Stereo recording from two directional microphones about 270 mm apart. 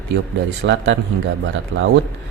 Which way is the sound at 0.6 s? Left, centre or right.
Right.